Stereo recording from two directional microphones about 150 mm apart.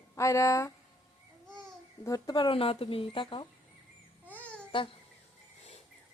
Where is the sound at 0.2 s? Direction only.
20° left (ahead or behind).